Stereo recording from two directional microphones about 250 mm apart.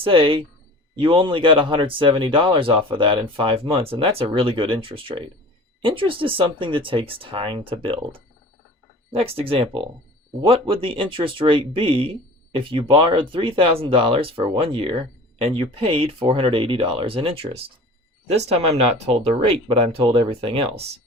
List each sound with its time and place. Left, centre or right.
0.0 s speech: right